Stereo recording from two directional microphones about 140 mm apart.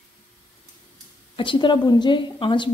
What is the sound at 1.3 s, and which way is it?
A woman's voice, 35° left (ahead or behind).